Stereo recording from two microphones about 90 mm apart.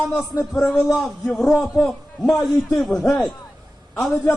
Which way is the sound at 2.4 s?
Centre (ahead or behind).